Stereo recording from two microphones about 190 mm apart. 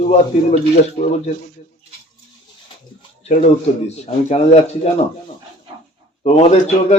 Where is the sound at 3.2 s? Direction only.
35° left (ahead or behind).